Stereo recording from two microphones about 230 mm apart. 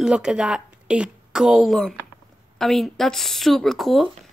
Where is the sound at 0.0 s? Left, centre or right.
Centre.